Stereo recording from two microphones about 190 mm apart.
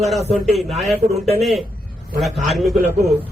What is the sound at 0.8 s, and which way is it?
A man's voice, centre (ahead or behind).